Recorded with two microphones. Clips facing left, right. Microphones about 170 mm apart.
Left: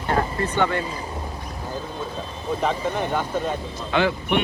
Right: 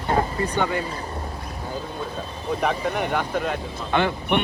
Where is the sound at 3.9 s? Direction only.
55° right (ahead or behind).